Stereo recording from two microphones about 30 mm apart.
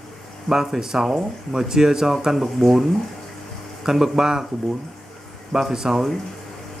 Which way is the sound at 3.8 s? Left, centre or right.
Centre.